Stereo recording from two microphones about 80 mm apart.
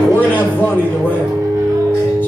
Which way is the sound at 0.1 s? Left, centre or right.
Left.